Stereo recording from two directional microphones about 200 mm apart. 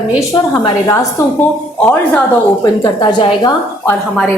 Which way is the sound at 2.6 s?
20° left (ahead or behind).